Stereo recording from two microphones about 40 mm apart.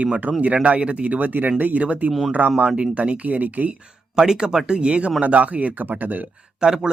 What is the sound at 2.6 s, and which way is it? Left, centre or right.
Speech, right.